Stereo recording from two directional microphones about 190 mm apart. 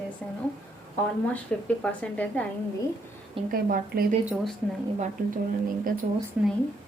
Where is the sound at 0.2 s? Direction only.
Centre (ahead or behind).